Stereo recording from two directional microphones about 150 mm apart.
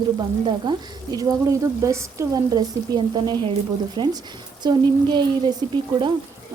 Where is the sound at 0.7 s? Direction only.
25° right (ahead or behind).